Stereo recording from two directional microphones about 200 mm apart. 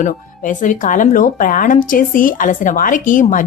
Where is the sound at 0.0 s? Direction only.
40° left (ahead or behind).